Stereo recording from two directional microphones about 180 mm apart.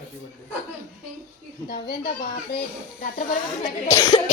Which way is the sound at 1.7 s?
55° left (ahead or behind).